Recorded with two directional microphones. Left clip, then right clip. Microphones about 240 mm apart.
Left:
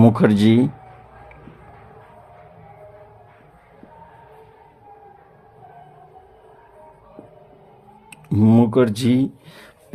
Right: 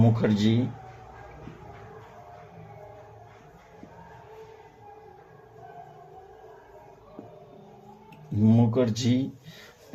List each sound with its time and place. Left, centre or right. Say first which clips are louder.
0.0 s speech: left 9 dB; left
8.1 s speech: left 8 dB; left